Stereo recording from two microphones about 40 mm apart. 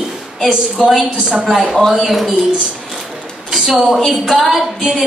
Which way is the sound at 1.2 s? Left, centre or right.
Centre.